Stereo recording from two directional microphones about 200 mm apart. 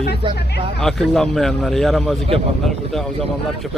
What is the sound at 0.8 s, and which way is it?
Speech, centre (ahead or behind).